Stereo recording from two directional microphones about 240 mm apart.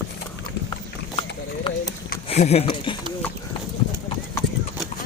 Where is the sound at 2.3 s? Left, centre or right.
Left.